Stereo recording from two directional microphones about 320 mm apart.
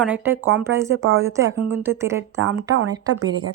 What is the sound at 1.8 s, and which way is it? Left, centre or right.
Speech, centre.